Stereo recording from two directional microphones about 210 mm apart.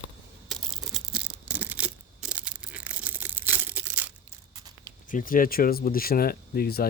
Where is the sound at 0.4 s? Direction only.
Centre (ahead or behind).